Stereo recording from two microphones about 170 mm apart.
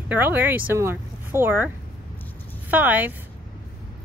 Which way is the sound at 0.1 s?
10° right (ahead or behind).